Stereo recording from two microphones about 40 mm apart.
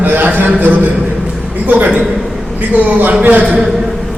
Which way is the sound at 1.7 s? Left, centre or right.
Right.